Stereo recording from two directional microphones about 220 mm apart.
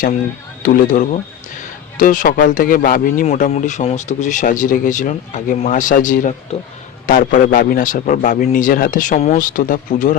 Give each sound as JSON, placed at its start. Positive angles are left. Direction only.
{"t": 0.6, "sound": "speech", "side_deg": 40}